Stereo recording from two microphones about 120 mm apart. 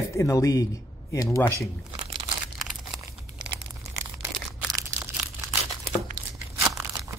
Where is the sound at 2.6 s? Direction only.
Centre (ahead or behind).